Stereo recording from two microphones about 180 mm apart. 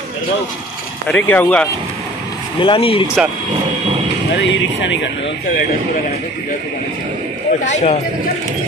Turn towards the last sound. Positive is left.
turn(degrees=35)  # may be behind; listen again after turning